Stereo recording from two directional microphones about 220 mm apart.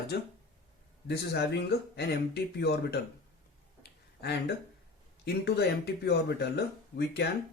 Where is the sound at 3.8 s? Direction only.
45° left (ahead or behind).